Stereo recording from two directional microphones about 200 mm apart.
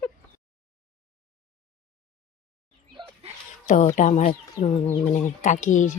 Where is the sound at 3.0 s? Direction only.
25° right (ahead or behind).